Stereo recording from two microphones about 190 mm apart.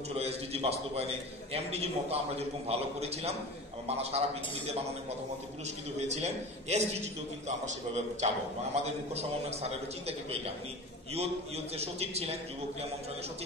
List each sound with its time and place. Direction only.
0.2 s a man's voice: 30° right (ahead or behind)
5.9 s a man's voice: 35° right (ahead or behind)